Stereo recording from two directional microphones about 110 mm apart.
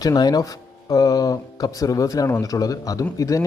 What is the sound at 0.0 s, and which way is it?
A man's voice, 35° left (ahead or behind).